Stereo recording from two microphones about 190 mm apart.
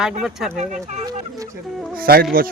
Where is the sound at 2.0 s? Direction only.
50° right (ahead or behind).